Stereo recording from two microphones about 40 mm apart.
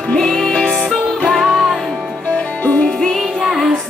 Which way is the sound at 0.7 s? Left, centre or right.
Centre.